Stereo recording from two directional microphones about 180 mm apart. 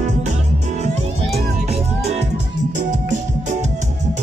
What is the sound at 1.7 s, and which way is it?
Music, 40° right (ahead or behind).